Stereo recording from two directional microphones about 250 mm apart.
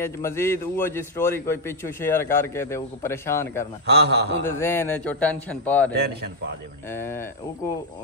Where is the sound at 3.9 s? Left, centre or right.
Right.